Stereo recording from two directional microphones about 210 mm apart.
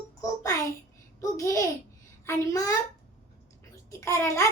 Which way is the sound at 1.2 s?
15° left (ahead or behind).